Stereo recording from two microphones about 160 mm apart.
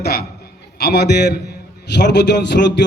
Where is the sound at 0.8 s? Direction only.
90° left.